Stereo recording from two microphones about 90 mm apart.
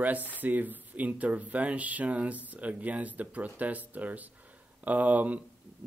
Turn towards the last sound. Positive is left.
turn(degrees=-15)  # may be behind; listen again after turning